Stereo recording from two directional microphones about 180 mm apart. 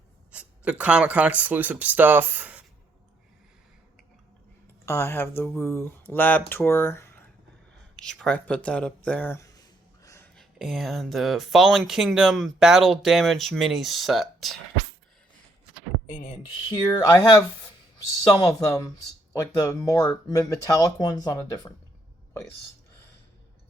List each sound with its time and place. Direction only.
0.3 s speech: 5° right (ahead or behind)
4.9 s speech: 15° left (ahead or behind)
9.0 s a sound: 10° left (ahead or behind)
10.3 s speech: centre (ahead or behind)
16.0 s speech: 50° left (ahead or behind)
16.6 s speech: 15° left (ahead or behind)